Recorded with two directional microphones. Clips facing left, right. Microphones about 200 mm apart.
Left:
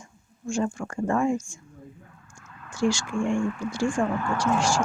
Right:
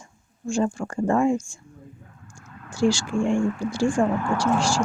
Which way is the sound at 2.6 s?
30° right (ahead or behind).